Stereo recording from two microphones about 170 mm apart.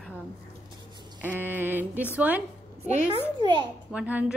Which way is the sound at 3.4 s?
25° right (ahead or behind).